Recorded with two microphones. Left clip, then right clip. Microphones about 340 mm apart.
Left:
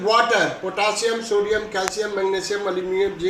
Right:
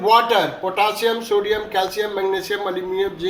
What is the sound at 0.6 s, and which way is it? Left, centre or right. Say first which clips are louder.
A man's voice: right 3 dB; centre.